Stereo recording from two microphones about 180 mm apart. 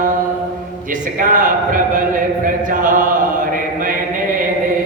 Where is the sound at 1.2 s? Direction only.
50° right (ahead or behind).